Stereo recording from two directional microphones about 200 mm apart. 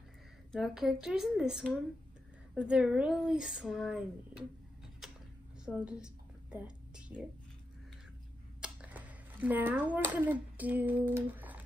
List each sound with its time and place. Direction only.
0.5 s speech: centre (ahead or behind)
5.0 s a sound: centre (ahead or behind)
5.8 s a woman's voice: 5° right (ahead or behind)
8.5 s speech: 5° right (ahead or behind)